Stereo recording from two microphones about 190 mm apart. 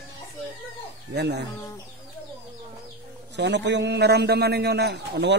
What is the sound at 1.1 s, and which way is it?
Speech, 65° right (ahead or behind).